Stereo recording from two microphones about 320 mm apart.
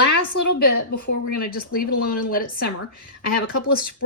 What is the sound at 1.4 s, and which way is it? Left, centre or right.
Speech, left.